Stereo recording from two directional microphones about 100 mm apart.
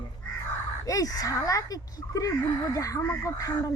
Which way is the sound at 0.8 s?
35° left (ahead or behind).